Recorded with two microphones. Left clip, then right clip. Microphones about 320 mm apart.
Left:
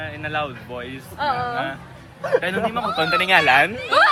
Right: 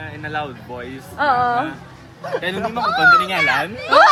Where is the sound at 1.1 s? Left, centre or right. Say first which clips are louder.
Right 6 dB; right.